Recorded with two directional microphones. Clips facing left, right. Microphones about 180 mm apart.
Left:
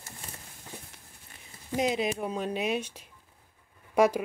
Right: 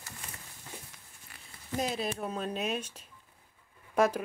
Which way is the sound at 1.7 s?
15° left (ahead or behind).